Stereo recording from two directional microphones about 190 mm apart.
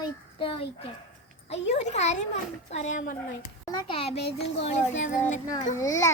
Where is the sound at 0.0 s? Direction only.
25° left (ahead or behind).